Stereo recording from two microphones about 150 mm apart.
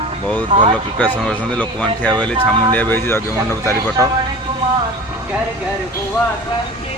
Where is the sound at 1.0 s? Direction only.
10° left (ahead or behind).